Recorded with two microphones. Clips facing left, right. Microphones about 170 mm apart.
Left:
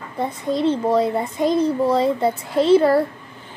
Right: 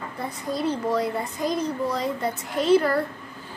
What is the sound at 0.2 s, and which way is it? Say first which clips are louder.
A child's voice: left 7 dB; 25° left (ahead or behind).